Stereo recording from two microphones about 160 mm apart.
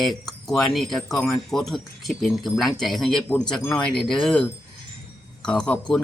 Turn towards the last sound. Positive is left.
turn(degrees=5)  # may be behind; listen again after turning